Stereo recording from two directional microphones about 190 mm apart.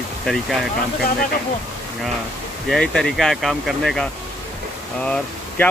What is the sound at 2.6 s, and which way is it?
Speech, 5° left (ahead or behind).